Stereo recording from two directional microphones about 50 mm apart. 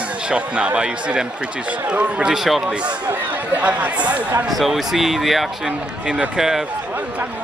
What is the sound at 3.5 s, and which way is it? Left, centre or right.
Speech, right.